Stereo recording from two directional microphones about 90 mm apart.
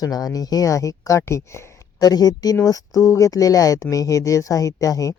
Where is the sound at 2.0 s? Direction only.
45° left (ahead or behind).